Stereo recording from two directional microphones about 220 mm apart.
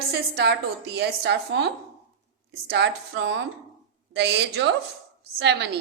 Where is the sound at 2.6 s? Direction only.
50° right (ahead or behind).